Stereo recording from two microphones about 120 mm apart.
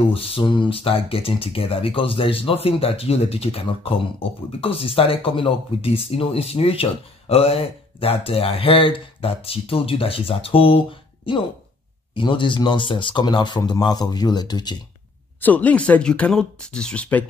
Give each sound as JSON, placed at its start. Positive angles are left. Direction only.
{"t": 0.1, "sound": "speech", "side_deg": 50}
{"t": 15.4, "sound": "speech", "side_deg": 10}